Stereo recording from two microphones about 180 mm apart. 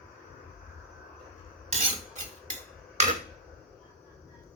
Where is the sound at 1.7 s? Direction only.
45° right (ahead or behind).